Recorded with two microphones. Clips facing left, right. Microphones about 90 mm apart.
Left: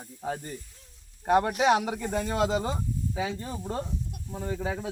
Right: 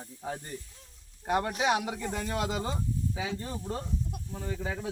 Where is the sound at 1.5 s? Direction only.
30° left (ahead or behind).